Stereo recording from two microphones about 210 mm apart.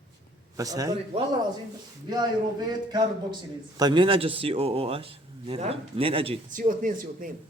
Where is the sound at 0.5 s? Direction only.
15° right (ahead or behind).